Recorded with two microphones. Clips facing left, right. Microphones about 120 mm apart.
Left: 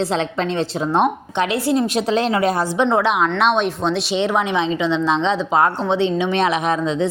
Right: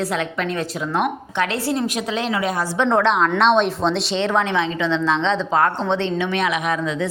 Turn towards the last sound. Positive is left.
turn(degrees=30)  # may be behind; listen again after turning